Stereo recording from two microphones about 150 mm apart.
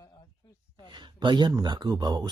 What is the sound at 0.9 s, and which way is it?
A man's voice, 30° right (ahead or behind).